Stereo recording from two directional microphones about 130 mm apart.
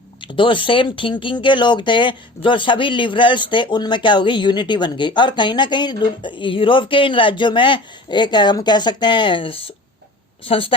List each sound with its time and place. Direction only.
0.2 s a woman's voice: 40° left (ahead or behind)